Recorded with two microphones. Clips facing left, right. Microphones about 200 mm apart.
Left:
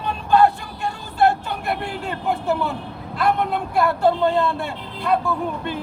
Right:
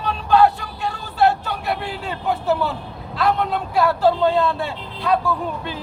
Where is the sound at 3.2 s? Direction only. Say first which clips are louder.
Even; 55° left (ahead or behind).